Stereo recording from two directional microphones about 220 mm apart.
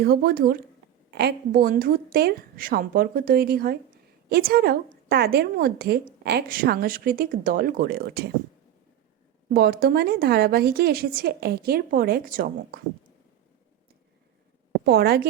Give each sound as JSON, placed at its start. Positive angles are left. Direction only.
{"t": 0.0, "sound": "a woman's voice", "side_deg": -45}
{"t": 9.5, "sound": "a woman's voice", "side_deg": -45}
{"t": 14.8, "sound": "a woman's voice", "side_deg": -45}